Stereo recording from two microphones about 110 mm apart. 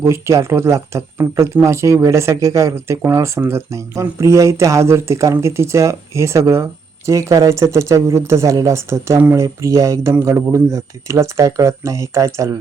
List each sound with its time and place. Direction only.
0.0 s speech: 25° right (ahead or behind)